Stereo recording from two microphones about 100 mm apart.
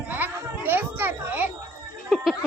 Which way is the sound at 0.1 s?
20° right (ahead or behind).